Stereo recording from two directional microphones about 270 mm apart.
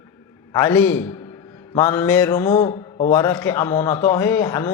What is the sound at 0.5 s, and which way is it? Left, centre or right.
A man's voice, centre.